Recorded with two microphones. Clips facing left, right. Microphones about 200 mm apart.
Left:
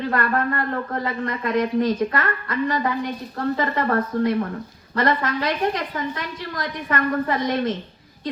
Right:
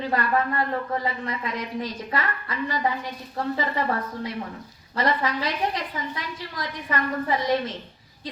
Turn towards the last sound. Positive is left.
turn(degrees=55)  # may be behind; listen again after turning